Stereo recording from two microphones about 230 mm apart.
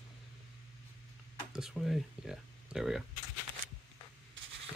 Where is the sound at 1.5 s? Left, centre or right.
Centre.